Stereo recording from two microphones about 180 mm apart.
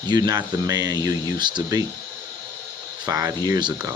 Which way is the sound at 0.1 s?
20° right (ahead or behind).